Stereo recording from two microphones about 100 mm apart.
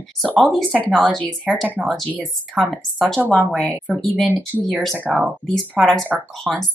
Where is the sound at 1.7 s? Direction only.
15° right (ahead or behind).